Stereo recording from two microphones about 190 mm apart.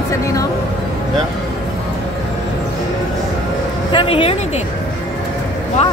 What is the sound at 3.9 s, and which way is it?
Speech, 30° left (ahead or behind).